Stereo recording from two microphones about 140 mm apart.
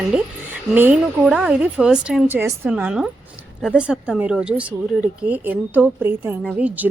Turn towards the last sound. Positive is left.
turn(degrees=-10)  # may be behind; listen again after turning